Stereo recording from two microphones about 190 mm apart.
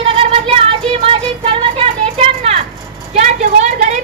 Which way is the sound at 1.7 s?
30° right (ahead or behind).